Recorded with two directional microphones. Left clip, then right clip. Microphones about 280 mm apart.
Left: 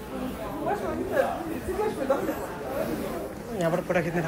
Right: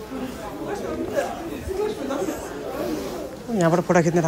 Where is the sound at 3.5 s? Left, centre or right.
Right.